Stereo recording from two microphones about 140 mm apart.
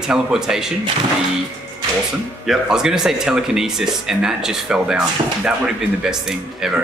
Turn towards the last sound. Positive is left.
turn(degrees=-5)  # may be behind; listen again after turning